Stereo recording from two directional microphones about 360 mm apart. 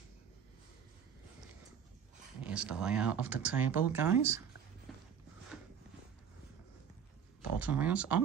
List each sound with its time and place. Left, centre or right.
2.4 s speech: centre
4.9 s a sound: centre
7.5 s speech: centre